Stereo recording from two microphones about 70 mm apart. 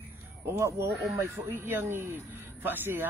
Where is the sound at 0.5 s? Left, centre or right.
Right.